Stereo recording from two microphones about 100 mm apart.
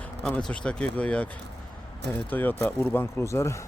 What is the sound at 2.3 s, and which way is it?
Speech, 15° left (ahead or behind).